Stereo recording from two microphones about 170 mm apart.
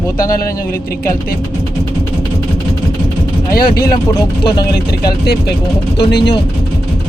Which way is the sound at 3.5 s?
60° left (ahead or behind).